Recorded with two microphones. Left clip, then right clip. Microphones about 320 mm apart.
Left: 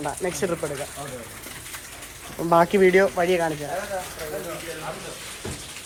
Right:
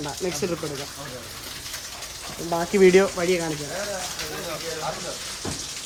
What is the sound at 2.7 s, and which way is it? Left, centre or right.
Speech, centre.